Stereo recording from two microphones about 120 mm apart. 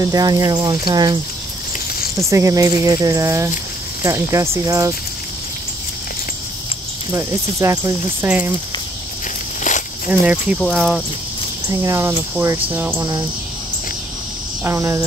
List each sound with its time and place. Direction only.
0.0 s speech: 30° right (ahead or behind)
2.1 s speech: 25° right (ahead or behind)
7.1 s speech: 25° right (ahead or behind)
9.6 s snake: 90° left
10.0 s speech: 15° right (ahead or behind)
11.7 s speech: 25° right (ahead or behind)
14.6 s speech: 25° right (ahead or behind)